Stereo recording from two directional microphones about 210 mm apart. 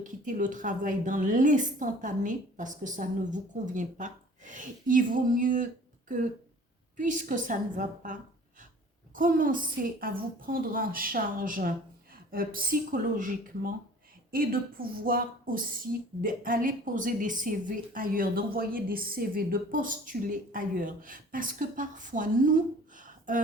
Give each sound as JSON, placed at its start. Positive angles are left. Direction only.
{"t": 0.0, "sound": "a woman's voice", "side_deg": -40}
{"t": 6.9, "sound": "a woman's voice", "side_deg": -40}
{"t": 23.0, "sound": "a sound", "side_deg": -40}